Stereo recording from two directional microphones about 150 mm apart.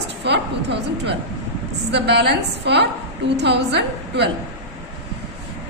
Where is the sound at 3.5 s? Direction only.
90° right.